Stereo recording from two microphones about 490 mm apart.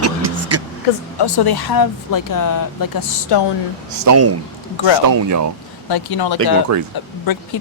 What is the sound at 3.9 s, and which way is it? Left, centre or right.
Speech, right.